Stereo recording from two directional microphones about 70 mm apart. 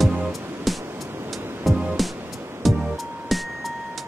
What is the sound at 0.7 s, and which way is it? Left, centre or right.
Music, centre.